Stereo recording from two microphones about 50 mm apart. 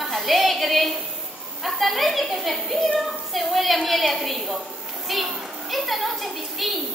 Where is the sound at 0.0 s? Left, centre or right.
Centre.